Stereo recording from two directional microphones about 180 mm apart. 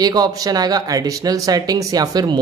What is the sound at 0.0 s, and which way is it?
Speech, 20° right (ahead or behind).